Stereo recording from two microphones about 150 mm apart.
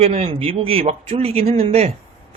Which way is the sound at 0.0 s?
45° right (ahead or behind).